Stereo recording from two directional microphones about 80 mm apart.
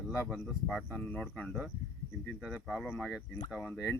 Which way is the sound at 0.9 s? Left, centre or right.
Centre.